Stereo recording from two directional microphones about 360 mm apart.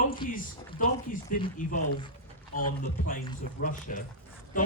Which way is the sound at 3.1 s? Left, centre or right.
Left.